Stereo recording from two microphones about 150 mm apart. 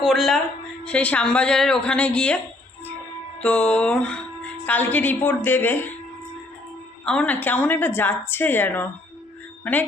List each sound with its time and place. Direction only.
0.0 s a woman's voice: centre (ahead or behind)
3.4 s speech: 10° left (ahead or behind)
7.0 s speech: 5° left (ahead or behind)